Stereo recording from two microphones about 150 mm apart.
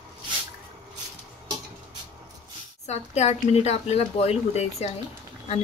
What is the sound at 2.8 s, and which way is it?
Speech, 45° left (ahead or behind).